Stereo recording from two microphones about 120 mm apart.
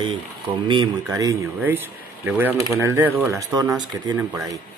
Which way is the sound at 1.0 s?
30° right (ahead or behind).